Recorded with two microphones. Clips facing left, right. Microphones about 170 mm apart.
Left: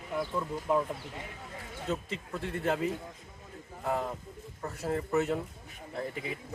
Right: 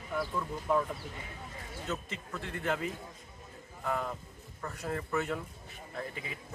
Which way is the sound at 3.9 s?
25° left (ahead or behind).